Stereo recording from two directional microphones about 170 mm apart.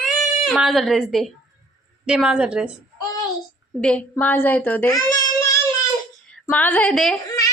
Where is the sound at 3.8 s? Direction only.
5° left (ahead or behind).